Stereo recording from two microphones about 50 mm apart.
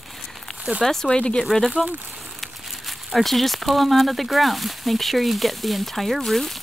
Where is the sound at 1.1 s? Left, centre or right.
Left.